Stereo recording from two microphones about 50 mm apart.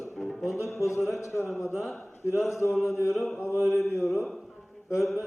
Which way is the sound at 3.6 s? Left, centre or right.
Right.